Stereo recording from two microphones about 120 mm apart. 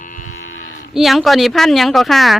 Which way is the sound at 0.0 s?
90° left.